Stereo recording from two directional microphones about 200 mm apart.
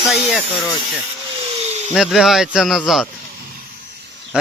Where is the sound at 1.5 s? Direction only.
35° right (ahead or behind).